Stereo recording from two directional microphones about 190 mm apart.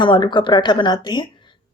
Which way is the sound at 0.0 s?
25° left (ahead or behind).